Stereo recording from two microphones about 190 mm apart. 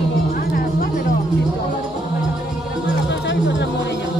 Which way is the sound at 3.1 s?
70° left (ahead or behind).